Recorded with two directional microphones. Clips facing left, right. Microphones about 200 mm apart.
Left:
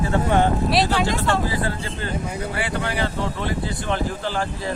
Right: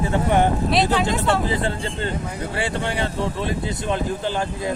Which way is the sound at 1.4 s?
25° right (ahead or behind).